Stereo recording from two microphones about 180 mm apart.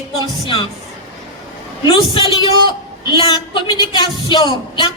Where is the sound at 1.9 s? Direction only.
25° left (ahead or behind).